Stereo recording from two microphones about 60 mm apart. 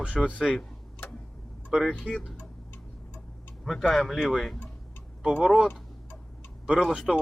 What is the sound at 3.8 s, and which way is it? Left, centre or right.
Speech, centre.